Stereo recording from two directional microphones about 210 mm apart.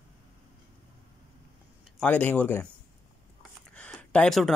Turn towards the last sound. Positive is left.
turn(degrees=0)  # may be behind; listen again after turning